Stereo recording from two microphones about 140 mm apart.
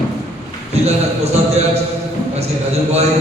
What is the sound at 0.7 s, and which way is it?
Speech, 50° right (ahead or behind).